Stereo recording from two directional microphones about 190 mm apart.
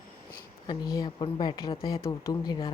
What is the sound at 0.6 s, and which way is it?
Speech, 20° left (ahead or behind).